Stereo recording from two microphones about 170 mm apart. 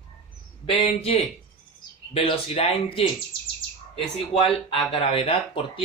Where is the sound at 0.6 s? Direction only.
35° left (ahead or behind).